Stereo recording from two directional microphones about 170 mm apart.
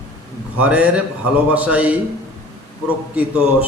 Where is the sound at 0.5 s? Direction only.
10° right (ahead or behind).